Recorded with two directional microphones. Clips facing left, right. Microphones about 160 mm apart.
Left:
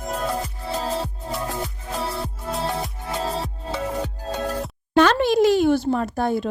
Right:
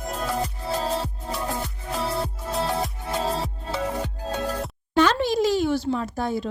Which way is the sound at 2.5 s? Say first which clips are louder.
Right 1 dB; centre (ahead or behind).